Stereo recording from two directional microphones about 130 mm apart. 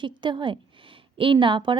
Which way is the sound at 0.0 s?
35° right (ahead or behind).